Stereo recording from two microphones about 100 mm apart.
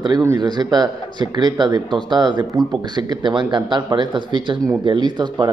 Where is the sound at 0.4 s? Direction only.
45° right (ahead or behind).